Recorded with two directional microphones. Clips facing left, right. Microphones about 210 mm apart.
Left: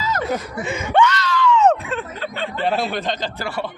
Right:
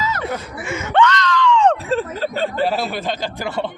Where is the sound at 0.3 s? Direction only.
15° left (ahead or behind).